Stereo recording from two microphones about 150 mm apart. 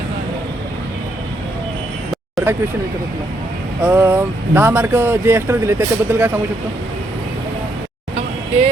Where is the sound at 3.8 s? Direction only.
15° right (ahead or behind).